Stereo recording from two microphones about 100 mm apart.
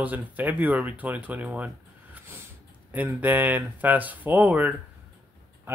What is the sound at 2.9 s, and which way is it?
Speech, 20° right (ahead or behind).